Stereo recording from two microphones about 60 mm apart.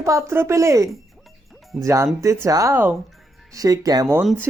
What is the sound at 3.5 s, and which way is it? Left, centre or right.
Speech, right.